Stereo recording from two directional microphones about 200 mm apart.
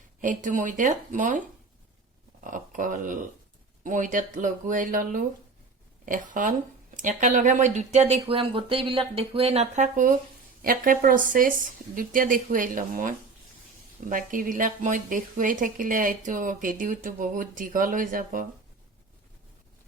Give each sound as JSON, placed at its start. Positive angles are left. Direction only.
{"t": 0.2, "sound": "speech", "side_deg": -40}
{"t": 2.4, "sound": "speech", "side_deg": -40}